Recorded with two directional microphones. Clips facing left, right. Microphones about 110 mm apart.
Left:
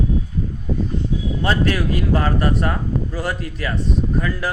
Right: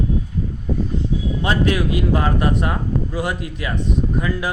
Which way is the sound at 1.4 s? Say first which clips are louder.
Right 1 dB; 15° right (ahead or behind).